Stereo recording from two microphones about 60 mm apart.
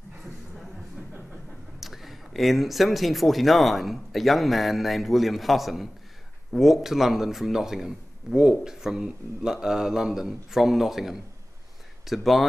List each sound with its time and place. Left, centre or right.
1.8 s speech: centre